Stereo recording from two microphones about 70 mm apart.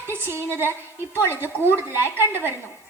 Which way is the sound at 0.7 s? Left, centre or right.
Left.